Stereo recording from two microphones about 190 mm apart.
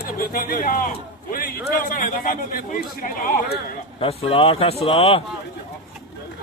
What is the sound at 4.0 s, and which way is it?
Speech, 30° left (ahead or behind).